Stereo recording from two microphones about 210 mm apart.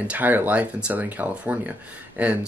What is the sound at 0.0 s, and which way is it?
Speech, 5° right (ahead or behind).